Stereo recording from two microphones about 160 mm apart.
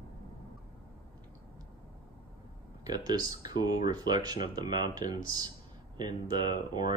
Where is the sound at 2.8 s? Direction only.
25° right (ahead or behind).